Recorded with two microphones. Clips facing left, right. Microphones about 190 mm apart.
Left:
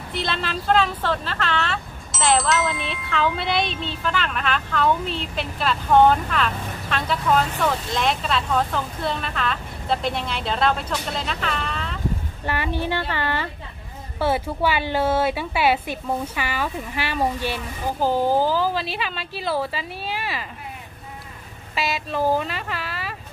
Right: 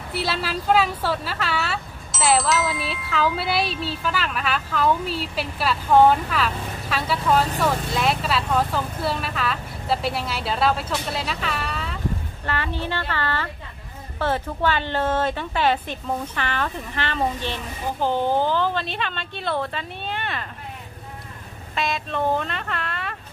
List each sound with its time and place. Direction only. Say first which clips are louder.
0.1 s speech: right 1 dB; 5° right (ahead or behind)
12.4 s a woman's voice: left 3 dB; 15° left (ahead or behind)
21.7 s speech: left 1 dB; 5° left (ahead or behind)